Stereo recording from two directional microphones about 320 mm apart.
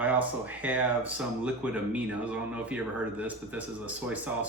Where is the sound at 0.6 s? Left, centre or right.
Centre.